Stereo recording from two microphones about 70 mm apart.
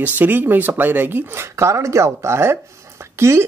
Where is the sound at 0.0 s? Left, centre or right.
Right.